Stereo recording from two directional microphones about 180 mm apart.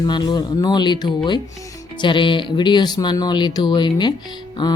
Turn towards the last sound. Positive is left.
turn(degrees=25)  # may be behind; listen again after turning